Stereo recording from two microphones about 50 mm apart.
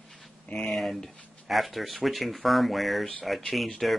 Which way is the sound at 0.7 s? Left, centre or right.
Centre.